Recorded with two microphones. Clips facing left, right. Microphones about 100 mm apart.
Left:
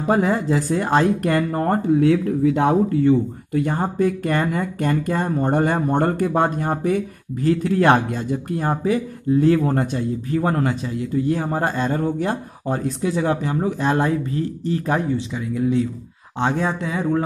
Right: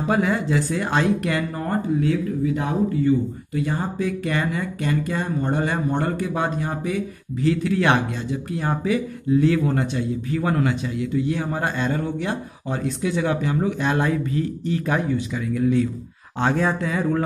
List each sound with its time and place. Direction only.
0.1 s speech: 35° left (ahead or behind); by 17.2 s 20° left (ahead or behind)